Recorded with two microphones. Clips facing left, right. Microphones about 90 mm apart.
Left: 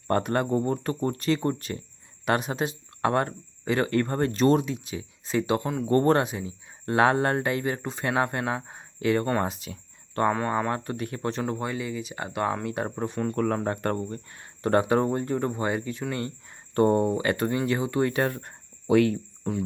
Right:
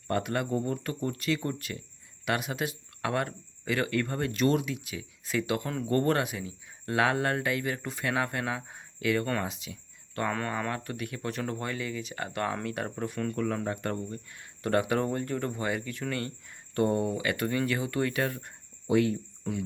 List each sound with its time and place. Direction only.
0.1 s speech: 40° left (ahead or behind)
9.4 s speech: 45° left (ahead or behind)
10.3 s speech: 20° left (ahead or behind)
11.4 s speech: 20° left (ahead or behind)
13.3 s speech: 45° left (ahead or behind)
18.9 s speech: 70° left (ahead or behind)
19.5 s speech: 45° left (ahead or behind)